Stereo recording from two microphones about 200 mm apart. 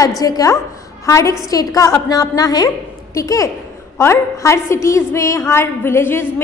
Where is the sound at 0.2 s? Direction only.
20° left (ahead or behind).